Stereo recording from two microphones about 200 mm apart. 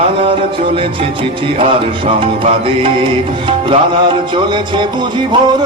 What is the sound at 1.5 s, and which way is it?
Music, 25° right (ahead or behind).